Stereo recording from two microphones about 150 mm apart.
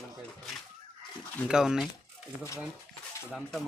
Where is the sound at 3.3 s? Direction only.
Centre (ahead or behind).